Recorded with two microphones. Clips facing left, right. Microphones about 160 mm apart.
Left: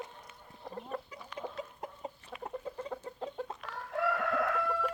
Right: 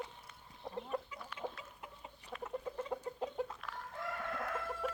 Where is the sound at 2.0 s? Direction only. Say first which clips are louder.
Left 10 dB; 40° left (ahead or behind).